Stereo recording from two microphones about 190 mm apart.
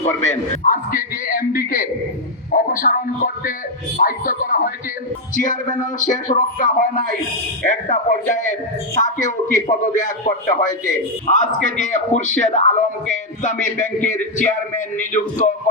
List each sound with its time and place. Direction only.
0.6 s a man's voice: 45° left (ahead or behind)